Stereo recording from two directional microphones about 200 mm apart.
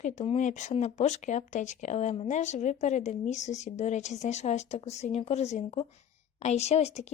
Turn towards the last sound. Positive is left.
turn(degrees=35)  # may be behind; listen again after turning